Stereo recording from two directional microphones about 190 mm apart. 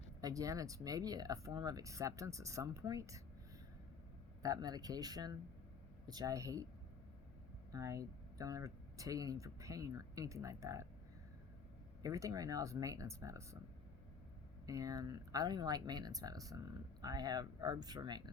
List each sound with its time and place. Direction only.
0.2 s speech: 20° right (ahead or behind)
4.4 s speech: 20° right (ahead or behind)
7.7 s speech: 15° right (ahead or behind)
12.0 s speech: 15° right (ahead or behind)
14.7 s speech: 20° right (ahead or behind)